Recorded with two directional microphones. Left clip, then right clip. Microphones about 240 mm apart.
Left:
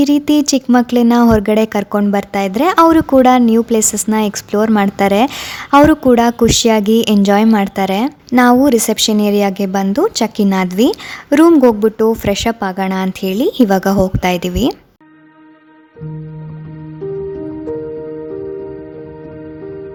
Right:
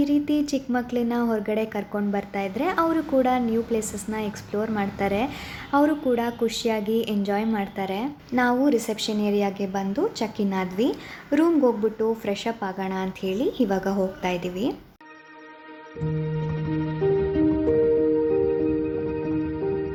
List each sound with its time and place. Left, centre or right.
0.0 s speech: left